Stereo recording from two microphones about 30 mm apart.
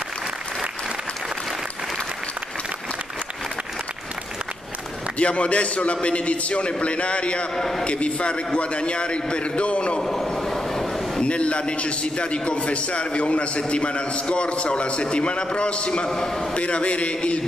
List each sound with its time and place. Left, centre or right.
5.2 s a man's voice: left
7.5 s a man's voice: centre
7.8 s a man's voice: left
10.0 s train: centre
11.2 s a man's voice: left
16.1 s a man's voice: centre
16.5 s a man's voice: left